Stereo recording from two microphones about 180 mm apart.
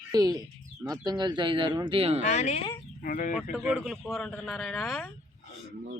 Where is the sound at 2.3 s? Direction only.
40° left (ahead or behind).